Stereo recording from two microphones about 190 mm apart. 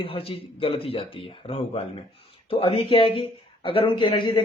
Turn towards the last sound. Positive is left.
turn(degrees=25)  # may be behind; listen again after turning